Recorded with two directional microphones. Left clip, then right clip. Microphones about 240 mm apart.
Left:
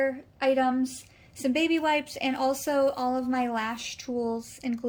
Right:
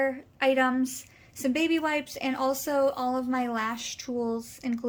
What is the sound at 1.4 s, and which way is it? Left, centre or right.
A woman's voice, centre.